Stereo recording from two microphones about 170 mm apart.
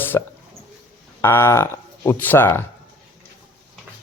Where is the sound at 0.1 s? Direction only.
15° left (ahead or behind).